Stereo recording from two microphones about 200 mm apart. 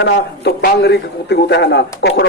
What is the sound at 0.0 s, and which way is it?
A man's voice, 55° left (ahead or behind).